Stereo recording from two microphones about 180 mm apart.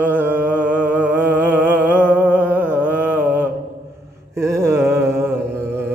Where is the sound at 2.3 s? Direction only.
10° right (ahead or behind).